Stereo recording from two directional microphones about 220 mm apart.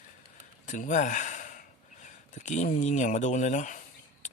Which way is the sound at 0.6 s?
35° left (ahead or behind).